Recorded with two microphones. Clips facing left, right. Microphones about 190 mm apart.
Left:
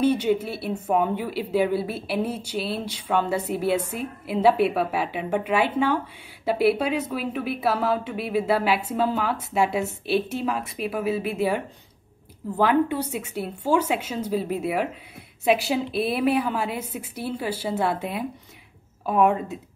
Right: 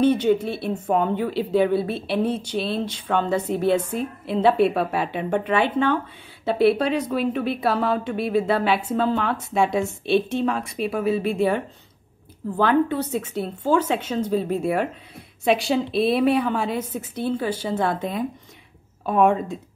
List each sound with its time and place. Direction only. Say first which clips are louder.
0.0 s a woman's voice: right 3 dB; 10° left (ahead or behind)
19.0 s a woman's voice: right 2 dB; 5° left (ahead or behind)